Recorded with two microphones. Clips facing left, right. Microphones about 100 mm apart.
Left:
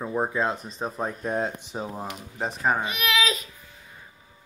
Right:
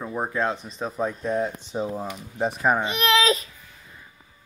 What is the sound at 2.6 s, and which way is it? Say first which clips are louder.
Speech: right 2 dB; 15° right (ahead or behind).